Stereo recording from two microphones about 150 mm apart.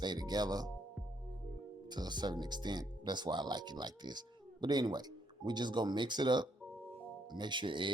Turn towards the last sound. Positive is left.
turn(degrees=-35)  # may be behind; listen again after turning